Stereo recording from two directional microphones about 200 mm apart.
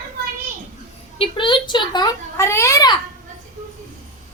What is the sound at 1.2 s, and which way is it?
A child's voice, 25° left (ahead or behind).